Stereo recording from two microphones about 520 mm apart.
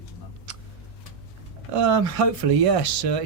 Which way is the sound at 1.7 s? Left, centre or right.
Right.